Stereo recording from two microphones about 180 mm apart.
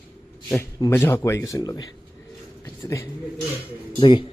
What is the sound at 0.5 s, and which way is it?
Speech, 15° left (ahead or behind).